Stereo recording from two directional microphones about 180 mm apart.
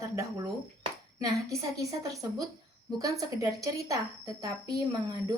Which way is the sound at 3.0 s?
20° right (ahead or behind).